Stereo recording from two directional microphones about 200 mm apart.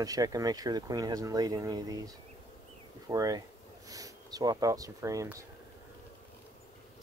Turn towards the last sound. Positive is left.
turn(degrees=-15)  # may be behind; listen again after turning